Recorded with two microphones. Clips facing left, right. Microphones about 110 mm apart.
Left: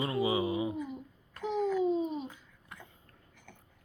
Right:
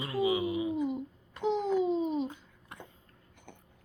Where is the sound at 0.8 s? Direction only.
25° right (ahead or behind).